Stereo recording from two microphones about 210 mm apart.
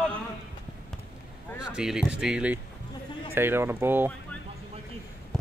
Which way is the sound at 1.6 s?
5° right (ahead or behind).